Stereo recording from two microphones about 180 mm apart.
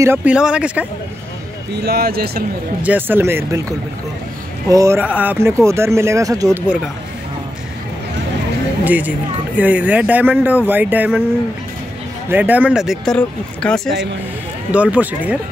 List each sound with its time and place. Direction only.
0.0 s speech: 10° right (ahead or behind)
1.7 s speech: 65° right (ahead or behind)
2.8 s speech: 10° right (ahead or behind)
4.6 s speech: 15° right (ahead or behind)
8.8 s speech: 10° right (ahead or behind)
12.3 s speech: 10° right (ahead or behind)
14.7 s speech: 5° right (ahead or behind)